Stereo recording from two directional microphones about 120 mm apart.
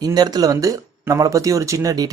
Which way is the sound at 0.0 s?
35° right (ahead or behind).